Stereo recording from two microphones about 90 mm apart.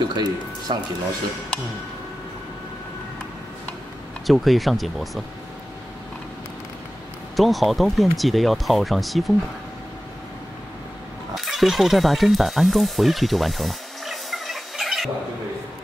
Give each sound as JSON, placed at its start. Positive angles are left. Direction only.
{"t": 0.1, "sound": "speech", "side_deg": -55}
{"t": 4.3, "sound": "speech", "side_deg": 0}
{"t": 7.3, "sound": "speech", "side_deg": 0}
{"t": 11.3, "sound": "music", "side_deg": 0}